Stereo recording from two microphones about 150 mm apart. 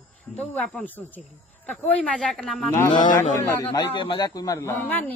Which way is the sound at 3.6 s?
30° left (ahead or behind).